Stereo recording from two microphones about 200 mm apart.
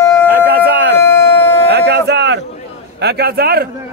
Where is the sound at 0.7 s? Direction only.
60° right (ahead or behind).